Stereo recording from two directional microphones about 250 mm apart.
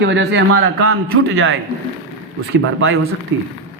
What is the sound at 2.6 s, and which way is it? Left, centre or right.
Speech, right.